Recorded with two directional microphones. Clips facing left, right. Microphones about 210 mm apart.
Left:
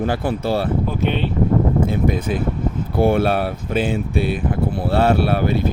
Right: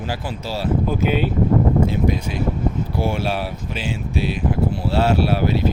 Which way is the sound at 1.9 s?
50° left (ahead or behind).